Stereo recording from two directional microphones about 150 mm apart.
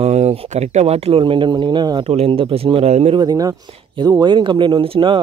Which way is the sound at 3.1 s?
25° right (ahead or behind).